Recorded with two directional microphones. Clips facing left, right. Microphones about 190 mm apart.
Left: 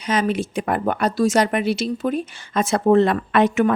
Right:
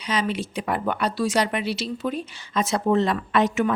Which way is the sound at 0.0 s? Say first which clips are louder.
Left 5 dB; 50° left (ahead or behind).